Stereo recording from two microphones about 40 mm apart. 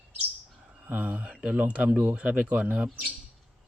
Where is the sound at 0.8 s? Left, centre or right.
Right.